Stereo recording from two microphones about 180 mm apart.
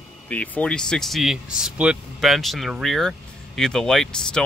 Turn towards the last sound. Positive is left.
turn(degrees=5)  # may be behind; listen again after turning